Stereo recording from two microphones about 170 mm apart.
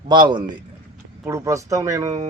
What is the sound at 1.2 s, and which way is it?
Speech, 15° right (ahead or behind).